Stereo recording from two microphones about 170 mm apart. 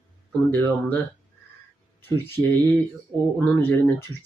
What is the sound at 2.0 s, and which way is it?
Speech, 15° left (ahead or behind).